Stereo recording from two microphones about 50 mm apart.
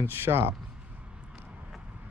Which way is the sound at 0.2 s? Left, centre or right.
Right.